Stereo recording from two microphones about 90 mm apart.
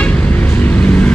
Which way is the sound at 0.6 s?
15° left (ahead or behind).